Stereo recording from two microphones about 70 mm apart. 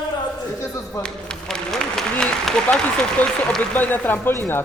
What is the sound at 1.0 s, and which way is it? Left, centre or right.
Speech, centre.